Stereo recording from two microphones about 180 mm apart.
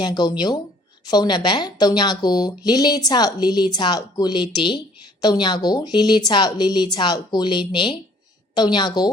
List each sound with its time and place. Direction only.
0.0 s speech: 25° left (ahead or behind)